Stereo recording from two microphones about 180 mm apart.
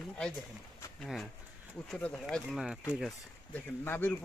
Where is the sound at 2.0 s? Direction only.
5° left (ahead or behind).